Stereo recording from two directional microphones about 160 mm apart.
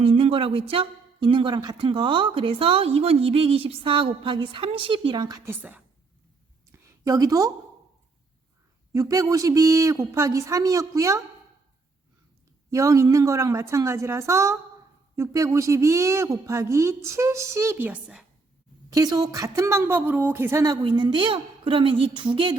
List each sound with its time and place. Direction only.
0.0 s speech: 35° right (ahead or behind)
5.5 s a woman's voice: 10° right (ahead or behind)
6.7 s a sound: 20° right (ahead or behind)
8.9 s speech: 20° right (ahead or behind)
12.7 s speech: 20° right (ahead or behind)
18.9 s speech: 25° right (ahead or behind)